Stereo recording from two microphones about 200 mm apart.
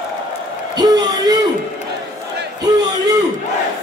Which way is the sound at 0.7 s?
20° right (ahead or behind).